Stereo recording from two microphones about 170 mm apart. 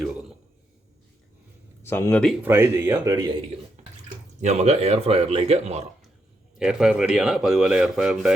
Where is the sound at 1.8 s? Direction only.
15° left (ahead or behind).